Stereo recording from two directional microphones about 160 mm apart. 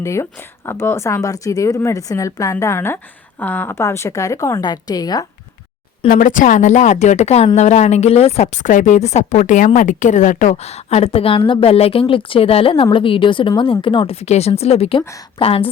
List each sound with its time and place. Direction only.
0.0 s a woman's voice: 20° left (ahead or behind)
6.1 s a woman's voice: 55° left (ahead or behind); by 15.7 s 35° left (ahead or behind)